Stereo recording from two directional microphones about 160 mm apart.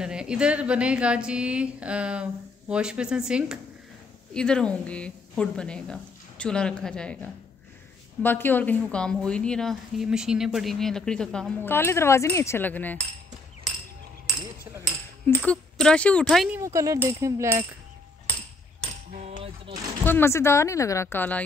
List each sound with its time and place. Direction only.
0.0 s a woman's voice: 5° right (ahead or behind)
11.6 s speech: 15° left (ahead or behind)
15.2 s a woman's voice: 5° left (ahead or behind)
16.5 s speech: 20° right (ahead or behind)
20.1 s speech: 15° left (ahead or behind)